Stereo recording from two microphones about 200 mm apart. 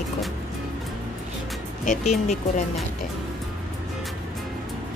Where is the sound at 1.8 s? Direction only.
35° left (ahead or behind).